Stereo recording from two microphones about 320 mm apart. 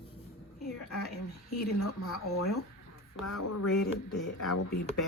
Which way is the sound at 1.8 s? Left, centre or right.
Left.